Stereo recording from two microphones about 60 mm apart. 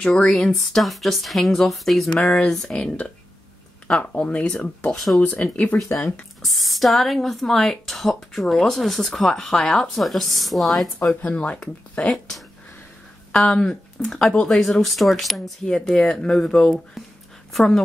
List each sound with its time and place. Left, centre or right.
0.0 s speech: centre
4.9 s speech: centre
5.7 s speech: left
6.4 s speech: centre
11.2 s speech: left
13.3 s speech: centre